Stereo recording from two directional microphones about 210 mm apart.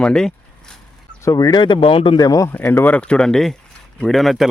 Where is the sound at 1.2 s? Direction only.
15° left (ahead or behind).